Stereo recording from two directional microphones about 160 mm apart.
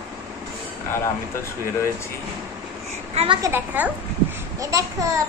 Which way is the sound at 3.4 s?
10° right (ahead or behind).